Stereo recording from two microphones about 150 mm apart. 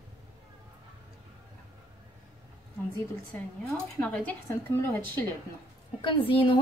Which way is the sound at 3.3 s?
10° left (ahead or behind).